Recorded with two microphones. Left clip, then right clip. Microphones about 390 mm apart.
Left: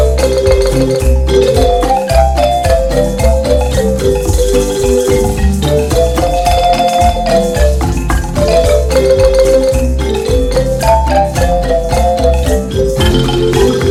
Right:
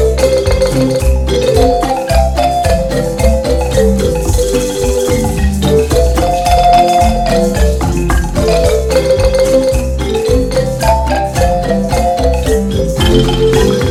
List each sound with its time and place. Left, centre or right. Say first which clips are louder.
6.4 s music: right 3 dB; centre